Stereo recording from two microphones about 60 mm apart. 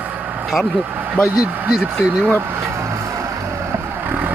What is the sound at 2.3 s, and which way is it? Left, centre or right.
Vehicle, right.